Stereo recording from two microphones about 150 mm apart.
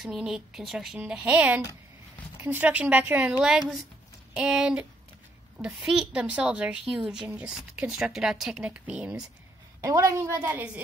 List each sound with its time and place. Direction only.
0.0 s speech: centre (ahead or behind)
9.8 s a woman's voice: 20° right (ahead or behind)